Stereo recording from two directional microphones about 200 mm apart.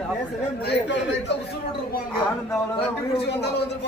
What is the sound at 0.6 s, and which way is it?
Speech, 55° left (ahead or behind).